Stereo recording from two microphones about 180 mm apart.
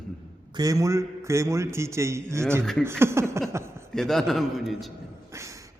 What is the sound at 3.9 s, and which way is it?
A man's voice, 5° left (ahead or behind).